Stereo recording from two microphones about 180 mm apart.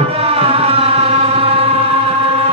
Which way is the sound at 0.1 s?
35° right (ahead or behind).